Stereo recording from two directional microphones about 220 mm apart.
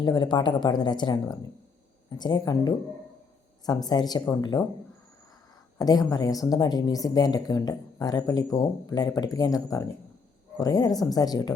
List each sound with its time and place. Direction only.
0.0 s speech: 20° left (ahead or behind)
5.8 s speech: 15° left (ahead or behind)